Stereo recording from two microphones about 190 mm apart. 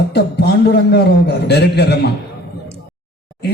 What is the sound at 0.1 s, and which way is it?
A man's voice, 60° left (ahead or behind).